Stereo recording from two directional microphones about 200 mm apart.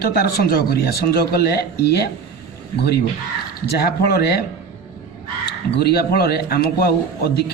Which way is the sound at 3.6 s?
55° left (ahead or behind).